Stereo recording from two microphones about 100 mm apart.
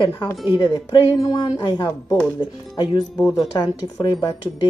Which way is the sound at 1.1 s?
35° left (ahead or behind).